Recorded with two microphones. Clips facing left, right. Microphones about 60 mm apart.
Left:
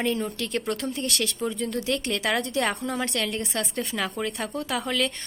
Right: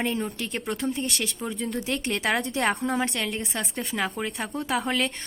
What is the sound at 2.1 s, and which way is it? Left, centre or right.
Speech, right.